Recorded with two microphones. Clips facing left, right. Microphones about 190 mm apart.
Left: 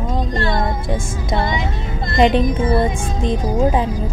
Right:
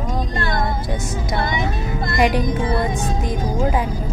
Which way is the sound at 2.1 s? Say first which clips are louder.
Left 4 dB; 25° left (ahead or behind).